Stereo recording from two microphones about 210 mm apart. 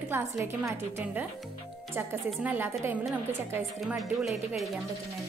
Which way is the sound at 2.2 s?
10° right (ahead or behind).